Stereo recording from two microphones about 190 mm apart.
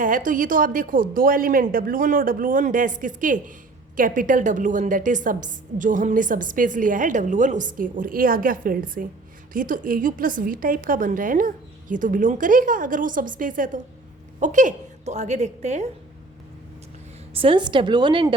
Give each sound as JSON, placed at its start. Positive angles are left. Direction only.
{"t": 0.3, "sound": "a woman's voice", "side_deg": -45}
{"t": 17.3, "sound": "a woman's voice", "side_deg": -30}